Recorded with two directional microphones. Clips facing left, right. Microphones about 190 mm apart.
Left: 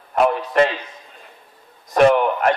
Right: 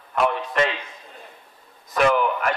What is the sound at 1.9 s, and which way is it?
Speech, 40° left (ahead or behind).